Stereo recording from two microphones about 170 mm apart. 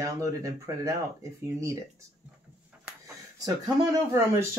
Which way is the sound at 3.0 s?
20° right (ahead or behind).